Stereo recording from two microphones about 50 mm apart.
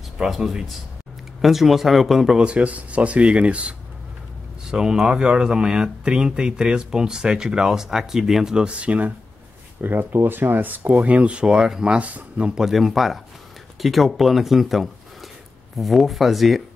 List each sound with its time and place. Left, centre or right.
0.2 s speech: centre
2.3 s speech: right
4.6 s speech: centre
8.6 s speech: right
9.8 s speech: right
11.1 s speech: right
12.0 s speech: right
12.6 s speech: centre